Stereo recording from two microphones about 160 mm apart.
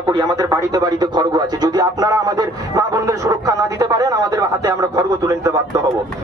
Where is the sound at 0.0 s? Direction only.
25° right (ahead or behind).